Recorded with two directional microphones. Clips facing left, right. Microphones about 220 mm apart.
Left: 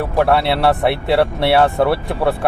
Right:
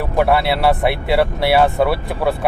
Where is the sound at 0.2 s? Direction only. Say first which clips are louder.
Even; centre (ahead or behind).